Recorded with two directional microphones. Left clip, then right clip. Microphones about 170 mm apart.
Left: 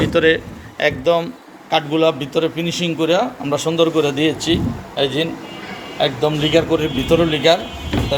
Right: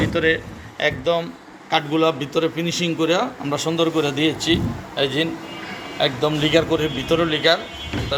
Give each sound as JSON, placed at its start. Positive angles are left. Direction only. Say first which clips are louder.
{"t": 0.0, "sound": "speech", "louder": "left 5 dB", "side_deg": 45}
{"t": 1.7, "sound": "a man's voice", "louder": "left 3 dB", "side_deg": 10}